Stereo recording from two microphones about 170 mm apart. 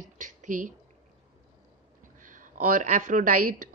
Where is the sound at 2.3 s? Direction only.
50° right (ahead or behind).